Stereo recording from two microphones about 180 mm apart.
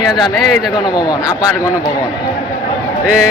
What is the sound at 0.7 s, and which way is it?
Speech, 25° left (ahead or behind).